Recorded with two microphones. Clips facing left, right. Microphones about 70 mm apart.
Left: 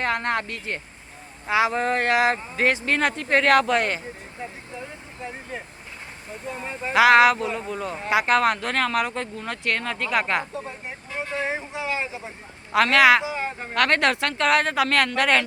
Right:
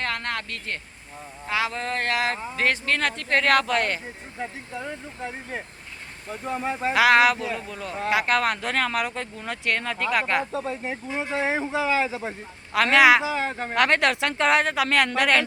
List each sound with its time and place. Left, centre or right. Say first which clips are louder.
0.0 s speech: left 5 dB; left
4.9 s vehicle: right 3 dB; right
6.5 s a woman's voice: right 5 dB; right
6.9 s speech: left 3 dB; centre
10.5 s speech: right 5 dB; right
12.9 s speech: right 1 dB; centre
13.3 s a woman's voice: right 3 dB; right
13.7 s speech: even; centre
14.0 s speech: left 1 dB; centre
14.3 s speech: right 1 dB; centre
14.6 s speech: left 1 dB; centre